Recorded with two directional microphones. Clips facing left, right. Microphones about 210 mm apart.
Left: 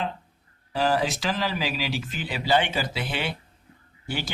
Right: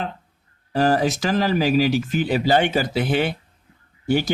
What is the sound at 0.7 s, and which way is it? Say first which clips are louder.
Speech: right 5 dB; 45° right (ahead or behind).